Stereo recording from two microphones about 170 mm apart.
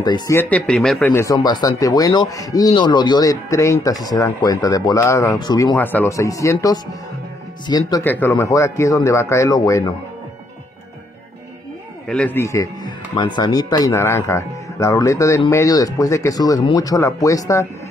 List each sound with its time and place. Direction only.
0.0 s speech: 25° left (ahead or behind)
0.4 s speech: 10° left (ahead or behind); by 5.8 s 25° left (ahead or behind)
5.8 s speech: 10° left (ahead or behind)
8.0 s speech: 10° left (ahead or behind)
12.1 s speech: 10° left (ahead or behind)